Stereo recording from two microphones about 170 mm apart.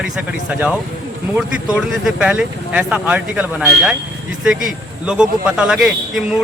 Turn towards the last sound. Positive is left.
turn(degrees=0)  # may be behind; listen again after turning